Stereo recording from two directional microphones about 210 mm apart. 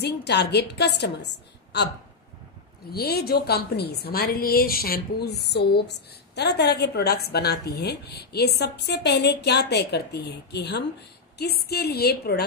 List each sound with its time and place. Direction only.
0.0 s a woman's voice: 50° left (ahead or behind)
2.9 s a woman's voice: 50° left (ahead or behind)